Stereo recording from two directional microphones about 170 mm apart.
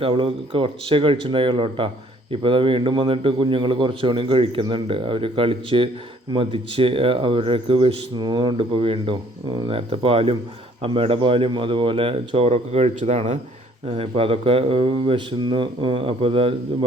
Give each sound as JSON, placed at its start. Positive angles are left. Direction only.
{"t": 0.0, "sound": "a man's voice", "side_deg": -35}